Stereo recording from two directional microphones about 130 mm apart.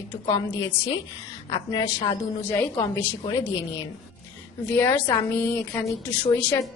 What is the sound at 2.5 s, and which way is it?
Speech, 15° left (ahead or behind).